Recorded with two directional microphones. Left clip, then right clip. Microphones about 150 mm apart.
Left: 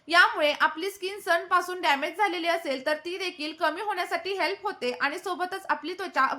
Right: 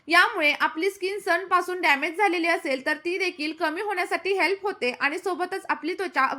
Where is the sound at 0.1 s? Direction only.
15° right (ahead or behind).